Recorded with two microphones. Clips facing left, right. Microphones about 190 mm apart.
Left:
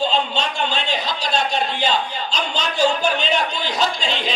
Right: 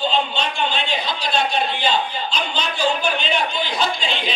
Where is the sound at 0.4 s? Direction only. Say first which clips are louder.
Even; 40° left (ahead or behind).